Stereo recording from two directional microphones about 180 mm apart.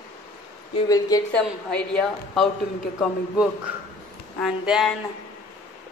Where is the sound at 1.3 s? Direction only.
5° left (ahead or behind).